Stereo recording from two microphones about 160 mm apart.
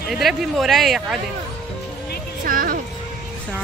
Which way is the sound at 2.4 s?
60° right (ahead or behind).